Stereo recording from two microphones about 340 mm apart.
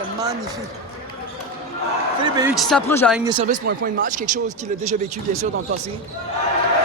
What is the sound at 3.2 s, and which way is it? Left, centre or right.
Speech, centre.